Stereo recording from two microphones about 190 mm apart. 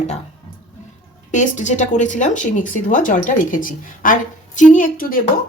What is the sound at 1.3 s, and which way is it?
Speech, 40° left (ahead or behind).